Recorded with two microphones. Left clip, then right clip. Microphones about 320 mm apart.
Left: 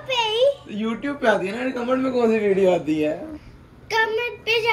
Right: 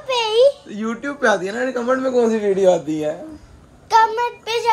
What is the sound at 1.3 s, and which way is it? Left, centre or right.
Speech, right.